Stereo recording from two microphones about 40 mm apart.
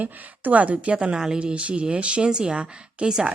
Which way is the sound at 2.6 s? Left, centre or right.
Right.